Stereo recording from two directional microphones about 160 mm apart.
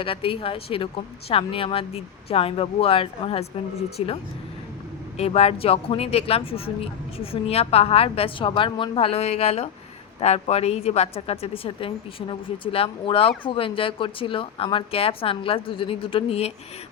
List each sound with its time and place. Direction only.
0.0 s speech: 35° left (ahead or behind)